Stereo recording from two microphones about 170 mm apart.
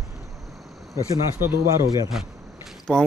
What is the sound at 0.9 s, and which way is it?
Speech, 15° right (ahead or behind).